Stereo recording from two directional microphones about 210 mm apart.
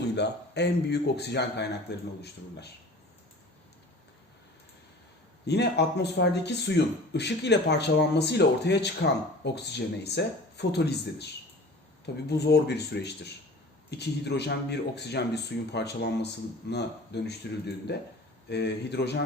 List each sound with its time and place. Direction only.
0.2 s speech: 55° left (ahead or behind)
5.5 s speech: 55° left (ahead or behind)
18.4 s speech: 55° left (ahead or behind)